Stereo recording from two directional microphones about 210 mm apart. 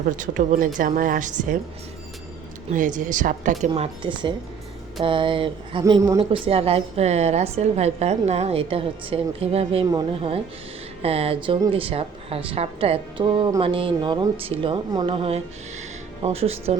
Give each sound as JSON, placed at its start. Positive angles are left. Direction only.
{"t": 0.2, "sound": "a woman's voice", "side_deg": -40}
{"t": 2.6, "sound": "a woman's voice", "side_deg": -35}
{"t": 3.7, "sound": "a woman's voice", "side_deg": -20}
{"t": 6.1, "sound": "a woman's voice", "side_deg": -25}